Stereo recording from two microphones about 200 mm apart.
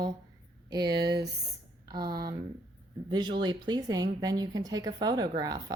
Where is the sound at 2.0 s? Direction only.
50° right (ahead or behind).